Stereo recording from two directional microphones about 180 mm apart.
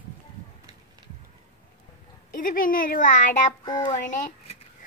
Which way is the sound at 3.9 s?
45° left (ahead or behind).